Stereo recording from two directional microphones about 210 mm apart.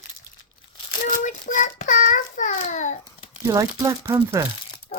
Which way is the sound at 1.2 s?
35° left (ahead or behind).